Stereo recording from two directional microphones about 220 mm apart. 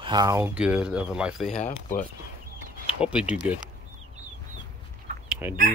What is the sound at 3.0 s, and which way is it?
Speech, 5° right (ahead or behind).